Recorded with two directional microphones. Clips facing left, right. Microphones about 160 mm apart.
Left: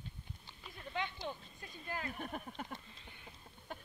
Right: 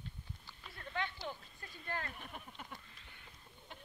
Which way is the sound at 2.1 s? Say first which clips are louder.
Left 7 dB; 45° left (ahead or behind).